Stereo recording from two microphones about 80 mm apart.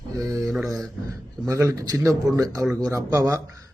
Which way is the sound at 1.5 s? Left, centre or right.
Right.